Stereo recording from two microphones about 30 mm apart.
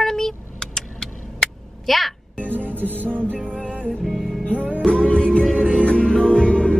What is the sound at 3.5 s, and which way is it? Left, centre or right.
Music, left.